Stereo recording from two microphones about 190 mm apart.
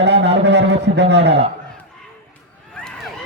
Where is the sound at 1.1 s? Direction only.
65° right (ahead or behind).